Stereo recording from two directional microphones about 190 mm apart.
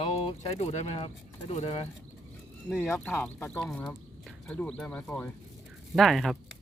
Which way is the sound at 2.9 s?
10° left (ahead or behind).